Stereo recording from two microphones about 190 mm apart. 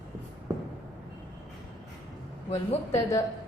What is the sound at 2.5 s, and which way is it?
Speech, 35° left (ahead or behind).